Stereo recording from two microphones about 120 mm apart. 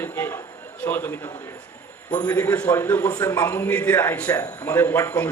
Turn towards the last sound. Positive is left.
turn(degrees=15)  # may be behind; listen again after turning